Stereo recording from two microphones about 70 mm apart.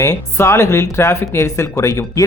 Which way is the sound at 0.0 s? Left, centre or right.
Left.